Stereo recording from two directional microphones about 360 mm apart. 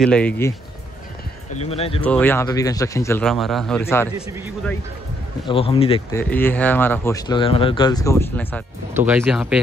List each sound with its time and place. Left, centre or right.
0.0 s speech: centre
1.6 s speech: centre
2.0 s speech: centre
5.5 s speech: centre